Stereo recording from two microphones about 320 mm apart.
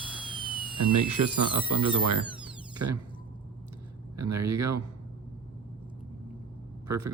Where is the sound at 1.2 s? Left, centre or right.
Right.